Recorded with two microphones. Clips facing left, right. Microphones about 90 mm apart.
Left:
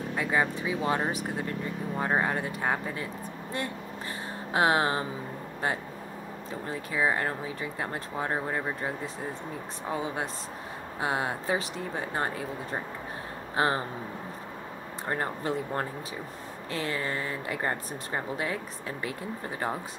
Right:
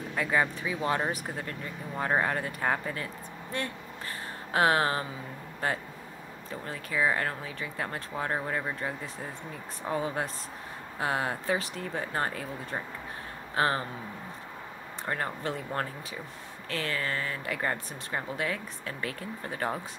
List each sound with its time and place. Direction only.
0.1 s speech: 15° left (ahead or behind)
4.5 s speech: 20° left (ahead or behind)
6.6 s speech: 20° left (ahead or behind)
15.0 s speech: 25° left (ahead or behind)